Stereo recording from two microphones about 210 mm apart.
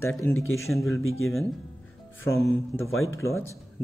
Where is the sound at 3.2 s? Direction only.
15° left (ahead or behind).